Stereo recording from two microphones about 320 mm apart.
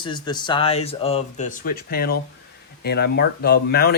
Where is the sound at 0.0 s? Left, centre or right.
Centre.